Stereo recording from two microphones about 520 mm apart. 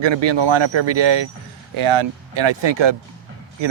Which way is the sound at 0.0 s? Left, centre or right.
Right.